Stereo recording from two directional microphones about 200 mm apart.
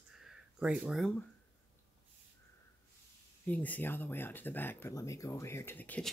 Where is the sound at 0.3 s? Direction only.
5° right (ahead or behind).